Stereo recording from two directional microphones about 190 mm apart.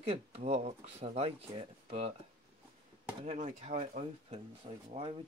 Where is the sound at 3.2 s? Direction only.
35° right (ahead or behind).